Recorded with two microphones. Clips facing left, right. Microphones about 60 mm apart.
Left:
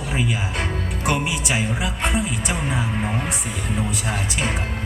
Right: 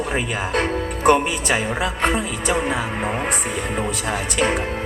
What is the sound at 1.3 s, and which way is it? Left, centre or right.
Music, right.